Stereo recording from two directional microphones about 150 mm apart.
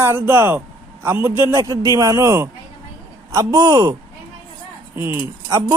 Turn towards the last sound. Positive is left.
turn(degrees=-15)  # may be behind; listen again after turning